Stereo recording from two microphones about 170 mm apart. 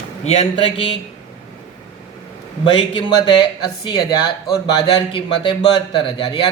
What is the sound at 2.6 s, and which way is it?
Speech, 30° left (ahead or behind).